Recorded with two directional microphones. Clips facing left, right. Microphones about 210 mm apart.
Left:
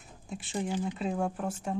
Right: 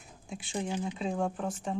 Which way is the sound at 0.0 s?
Centre (ahead or behind).